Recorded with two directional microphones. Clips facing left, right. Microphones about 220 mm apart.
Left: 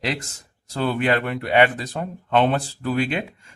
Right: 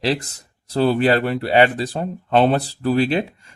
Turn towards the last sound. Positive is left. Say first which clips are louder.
# right 5 dB
turn(degrees=-35)  # may be behind; listen again after turning